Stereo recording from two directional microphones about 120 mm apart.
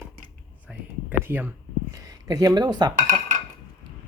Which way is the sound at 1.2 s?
15° right (ahead or behind).